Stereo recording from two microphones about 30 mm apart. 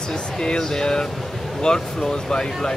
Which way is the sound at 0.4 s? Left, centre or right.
Left.